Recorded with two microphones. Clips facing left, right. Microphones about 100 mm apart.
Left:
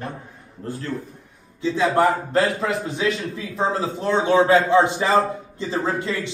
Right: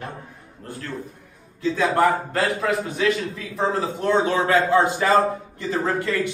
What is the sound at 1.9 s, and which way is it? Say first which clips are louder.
A man's voice: left 2 dB; 25° left (ahead or behind).